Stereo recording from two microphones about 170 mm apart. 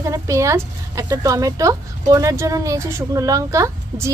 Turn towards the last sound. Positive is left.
turn(degrees=-20)  # may be behind; listen again after turning